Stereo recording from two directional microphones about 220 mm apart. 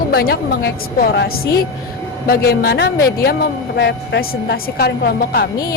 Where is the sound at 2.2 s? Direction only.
45° left (ahead or behind).